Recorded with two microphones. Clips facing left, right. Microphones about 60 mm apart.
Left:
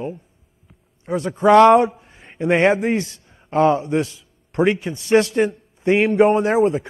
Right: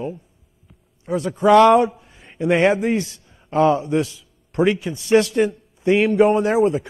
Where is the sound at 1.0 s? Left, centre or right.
Left.